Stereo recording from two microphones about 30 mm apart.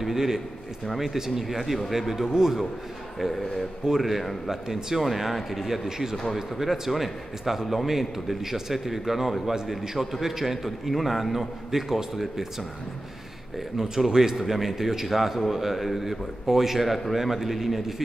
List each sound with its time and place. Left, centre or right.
0.0 s a man's voice: centre
3.2 s a man's voice: centre
4.5 s a man's voice: centre
5.0 s a man's voice: centre
5.9 s a man's voice: centre
6.3 s a man's voice: centre
13.7 s a man's voice: centre